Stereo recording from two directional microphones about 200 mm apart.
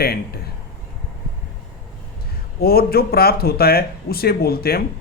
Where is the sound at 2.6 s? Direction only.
50° left (ahead or behind).